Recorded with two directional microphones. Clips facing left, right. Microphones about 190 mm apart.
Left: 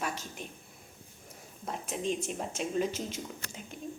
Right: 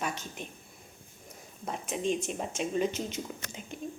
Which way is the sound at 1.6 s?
Centre (ahead or behind).